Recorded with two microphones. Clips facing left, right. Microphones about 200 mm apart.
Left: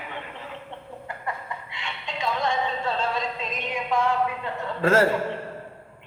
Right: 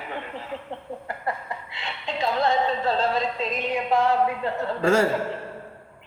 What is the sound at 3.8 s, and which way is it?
Speech, 35° right (ahead or behind).